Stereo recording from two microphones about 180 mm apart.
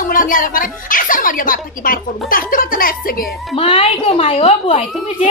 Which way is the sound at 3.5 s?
30° left (ahead or behind).